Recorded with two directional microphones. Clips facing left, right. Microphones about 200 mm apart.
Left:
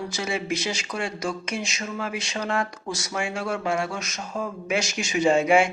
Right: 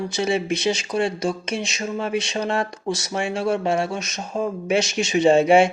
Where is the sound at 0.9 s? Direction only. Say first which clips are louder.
Right 6 dB; 30° right (ahead or behind).